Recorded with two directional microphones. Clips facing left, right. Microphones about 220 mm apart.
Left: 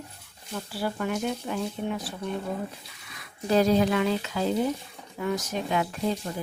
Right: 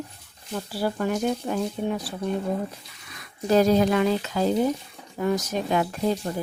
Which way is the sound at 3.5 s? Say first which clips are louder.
Right 3 dB; 45° right (ahead or behind).